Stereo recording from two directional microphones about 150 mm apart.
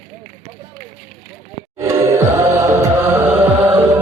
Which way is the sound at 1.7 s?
20° right (ahead or behind).